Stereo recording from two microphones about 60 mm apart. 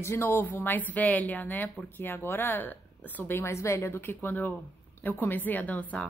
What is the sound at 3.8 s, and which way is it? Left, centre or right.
A woman's voice, left.